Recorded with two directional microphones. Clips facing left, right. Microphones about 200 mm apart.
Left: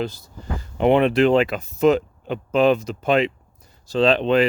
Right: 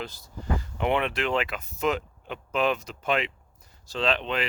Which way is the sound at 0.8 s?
35° left (ahead or behind).